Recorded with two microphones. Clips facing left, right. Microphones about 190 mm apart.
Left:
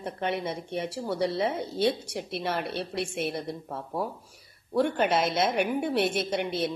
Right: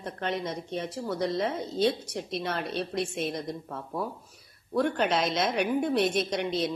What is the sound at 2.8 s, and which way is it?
Speech, 65° left (ahead or behind).